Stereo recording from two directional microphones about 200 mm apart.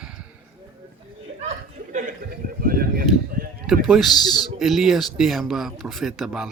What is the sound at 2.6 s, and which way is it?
Speech, 45° right (ahead or behind).